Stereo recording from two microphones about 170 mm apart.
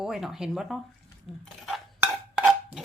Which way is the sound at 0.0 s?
Centre (ahead or behind).